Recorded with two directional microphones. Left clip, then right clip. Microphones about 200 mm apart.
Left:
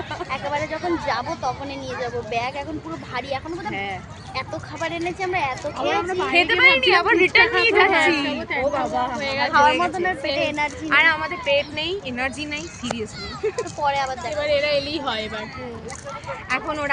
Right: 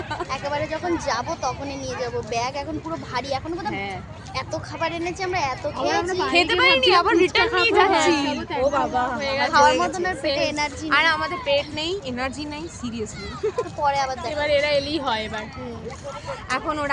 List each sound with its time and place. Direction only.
0.1 s a woman's voice: centre (ahead or behind)
4.4 s speech: 5° right (ahead or behind)
6.0 s a woman's voice: 20° right (ahead or behind)
9.1 s a woman's voice: 30° right (ahead or behind)
9.5 s a woman's voice: 10° right (ahead or behind)
9.9 s a woman's voice: 5° right (ahead or behind)
14.3 s a woman's voice: 40° right (ahead or behind)
16.5 s a woman's voice: 15° right (ahead or behind)